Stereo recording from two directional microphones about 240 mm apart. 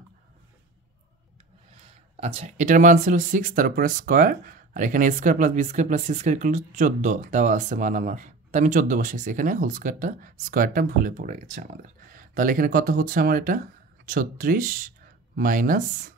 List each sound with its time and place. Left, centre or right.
2.1 s speech: right